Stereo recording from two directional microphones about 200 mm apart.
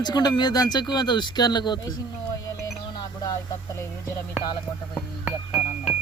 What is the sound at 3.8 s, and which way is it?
Speech, 15° left (ahead or behind).